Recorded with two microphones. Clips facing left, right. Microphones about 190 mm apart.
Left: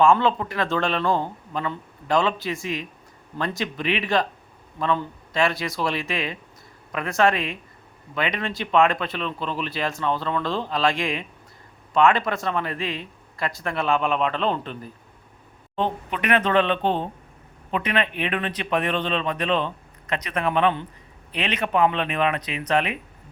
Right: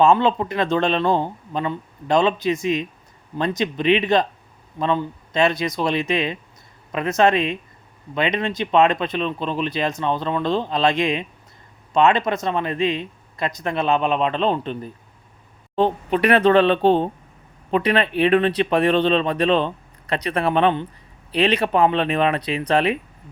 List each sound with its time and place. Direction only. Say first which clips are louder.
0.0 s speech: right 2 dB; 20° right (ahead or behind)
15.7 s speech: right 7 dB; 35° right (ahead or behind)